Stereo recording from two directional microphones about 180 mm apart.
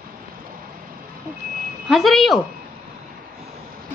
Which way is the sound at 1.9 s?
Centre (ahead or behind).